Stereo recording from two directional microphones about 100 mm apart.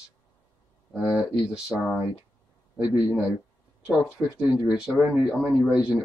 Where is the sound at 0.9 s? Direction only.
10° right (ahead or behind).